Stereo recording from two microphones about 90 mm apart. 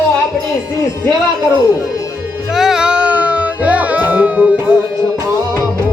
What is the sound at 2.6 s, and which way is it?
Music, 5° right (ahead or behind).